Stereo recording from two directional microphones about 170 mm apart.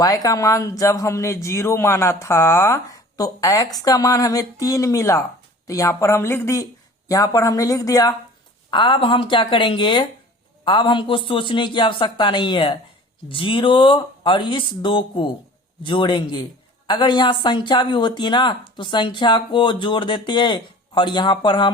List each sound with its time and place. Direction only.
0.0 s a woman's voice: 20° left (ahead or behind)